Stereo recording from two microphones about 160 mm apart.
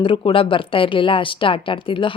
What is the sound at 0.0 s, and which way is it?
Speech, 30° left (ahead or behind).